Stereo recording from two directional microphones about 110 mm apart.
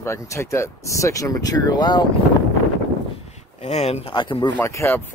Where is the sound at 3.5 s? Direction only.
70° left (ahead or behind).